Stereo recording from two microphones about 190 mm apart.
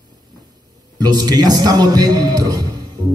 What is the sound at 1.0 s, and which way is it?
A man's voice, 20° right (ahead or behind).